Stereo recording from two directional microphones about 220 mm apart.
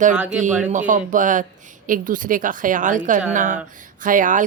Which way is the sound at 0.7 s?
35° right (ahead or behind).